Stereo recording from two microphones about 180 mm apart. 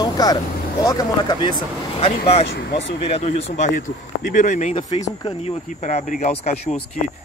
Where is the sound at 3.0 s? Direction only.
35° left (ahead or behind).